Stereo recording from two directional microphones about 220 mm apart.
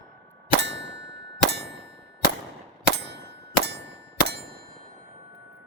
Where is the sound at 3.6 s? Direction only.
50° right (ahead or behind).